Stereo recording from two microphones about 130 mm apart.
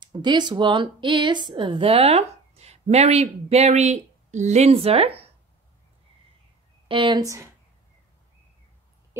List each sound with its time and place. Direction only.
0.0 s a woman's voice: 35° right (ahead or behind)
6.9 s speech: 35° right (ahead or behind)
9.1 s a sound: 15° right (ahead or behind)